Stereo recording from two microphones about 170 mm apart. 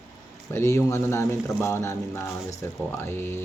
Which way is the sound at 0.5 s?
15° left (ahead or behind).